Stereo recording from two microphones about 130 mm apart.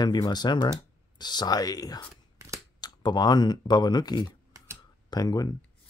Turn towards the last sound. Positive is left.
turn(degrees=30)  # may be behind; listen again after turning